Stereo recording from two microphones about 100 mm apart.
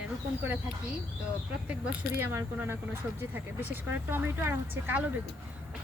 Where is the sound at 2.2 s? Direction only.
20° right (ahead or behind).